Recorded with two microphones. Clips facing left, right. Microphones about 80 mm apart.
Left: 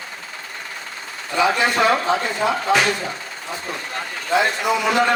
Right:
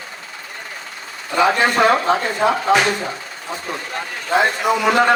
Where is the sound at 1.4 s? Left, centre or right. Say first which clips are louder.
Right 3 dB; right.